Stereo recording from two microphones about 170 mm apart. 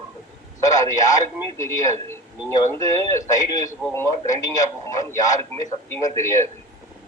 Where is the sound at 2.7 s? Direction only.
15° left (ahead or behind).